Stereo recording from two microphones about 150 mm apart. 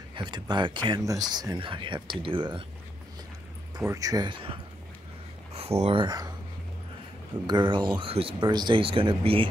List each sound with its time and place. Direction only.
0.1 s a sound: 30° right (ahead or behind)
0.8 s speech: 25° right (ahead or behind)
3.7 s speech: 20° right (ahead or behind)
5.5 s speech: 45° right (ahead or behind)
6.0 s speech: 25° right (ahead or behind)
7.4 s speech: 30° right (ahead or behind)